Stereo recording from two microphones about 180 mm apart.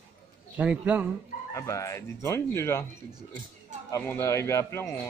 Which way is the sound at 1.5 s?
15° left (ahead or behind).